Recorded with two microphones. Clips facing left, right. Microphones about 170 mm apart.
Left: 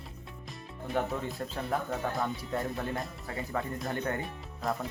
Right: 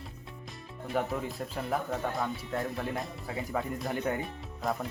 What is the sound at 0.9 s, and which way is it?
Speech, centre (ahead or behind).